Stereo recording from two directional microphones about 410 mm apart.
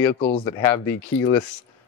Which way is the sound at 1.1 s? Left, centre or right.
Left.